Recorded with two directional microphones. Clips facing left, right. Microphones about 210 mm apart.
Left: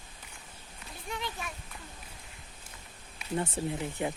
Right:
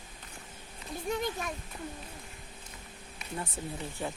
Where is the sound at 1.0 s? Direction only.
45° right (ahead or behind).